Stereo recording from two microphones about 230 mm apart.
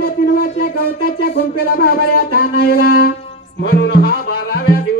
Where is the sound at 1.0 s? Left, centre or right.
Left.